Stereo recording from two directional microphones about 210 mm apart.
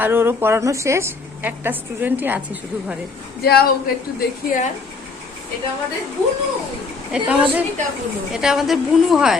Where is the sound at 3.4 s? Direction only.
50° left (ahead or behind).